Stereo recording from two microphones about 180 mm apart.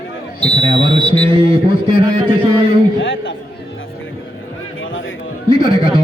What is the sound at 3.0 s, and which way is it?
Speech, 90° left.